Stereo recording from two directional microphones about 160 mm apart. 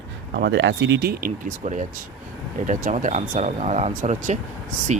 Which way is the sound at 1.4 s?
50° right (ahead or behind).